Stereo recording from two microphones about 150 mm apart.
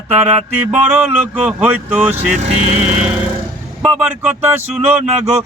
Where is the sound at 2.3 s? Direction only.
50° right (ahead or behind).